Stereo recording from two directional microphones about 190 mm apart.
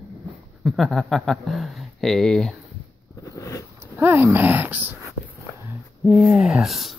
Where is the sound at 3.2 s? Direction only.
15° left (ahead or behind).